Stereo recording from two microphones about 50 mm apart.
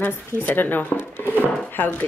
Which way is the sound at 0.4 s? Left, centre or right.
Left.